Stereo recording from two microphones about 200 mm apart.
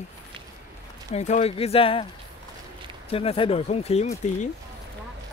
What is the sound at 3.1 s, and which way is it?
Speech, 25° left (ahead or behind).